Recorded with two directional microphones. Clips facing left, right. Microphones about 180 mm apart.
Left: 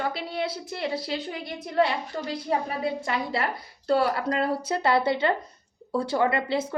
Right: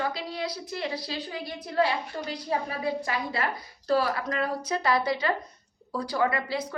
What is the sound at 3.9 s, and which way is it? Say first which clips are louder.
A woman's voice: left 2 dB; 30° left (ahead or behind).